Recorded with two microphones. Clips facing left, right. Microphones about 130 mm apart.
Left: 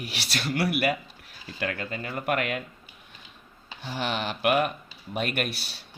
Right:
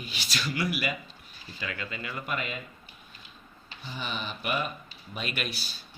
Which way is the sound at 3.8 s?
80° left.